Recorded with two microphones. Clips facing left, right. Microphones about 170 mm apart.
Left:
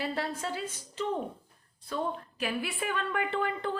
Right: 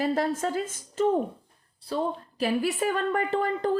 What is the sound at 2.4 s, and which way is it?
A woman's voice, 40° right (ahead or behind).